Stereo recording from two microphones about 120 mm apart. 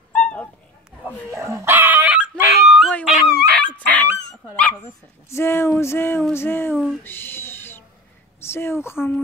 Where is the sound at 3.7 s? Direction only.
15° left (ahead or behind).